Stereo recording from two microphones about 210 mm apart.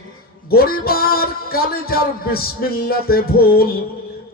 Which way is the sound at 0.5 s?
45° left (ahead or behind).